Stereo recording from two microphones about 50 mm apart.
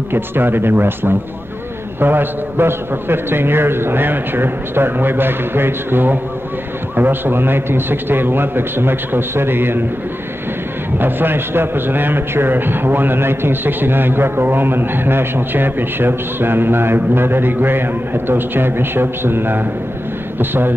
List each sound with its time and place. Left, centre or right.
0.1 s a man's voice: right
11.0 s a man's voice: right